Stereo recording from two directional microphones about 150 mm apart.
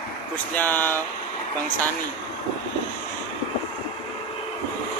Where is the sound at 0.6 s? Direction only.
10° left (ahead or behind).